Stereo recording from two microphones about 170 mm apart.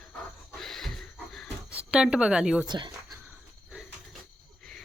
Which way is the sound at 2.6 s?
25° right (ahead or behind).